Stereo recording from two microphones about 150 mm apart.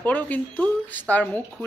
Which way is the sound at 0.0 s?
10° left (ahead or behind).